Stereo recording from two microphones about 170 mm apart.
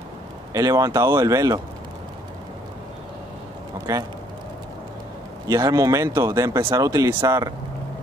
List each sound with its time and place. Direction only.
0.5 s speech: 20° right (ahead or behind)
3.9 s speech: 20° right (ahead or behind)
5.5 s speech: 20° right (ahead or behind)